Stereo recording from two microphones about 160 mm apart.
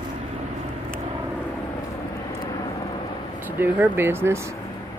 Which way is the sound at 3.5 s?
15° right (ahead or behind).